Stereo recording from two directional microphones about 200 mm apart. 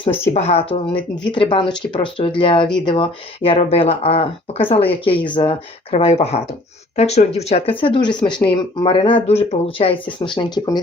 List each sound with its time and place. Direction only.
0.0 s speech: 30° left (ahead or behind)